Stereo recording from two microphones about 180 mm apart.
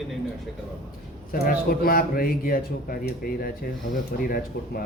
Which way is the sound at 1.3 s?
55° left (ahead or behind).